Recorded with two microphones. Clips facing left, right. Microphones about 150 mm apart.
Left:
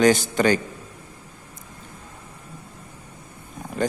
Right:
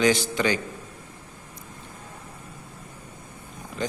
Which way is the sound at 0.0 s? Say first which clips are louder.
Left 4 dB; 45° left (ahead or behind).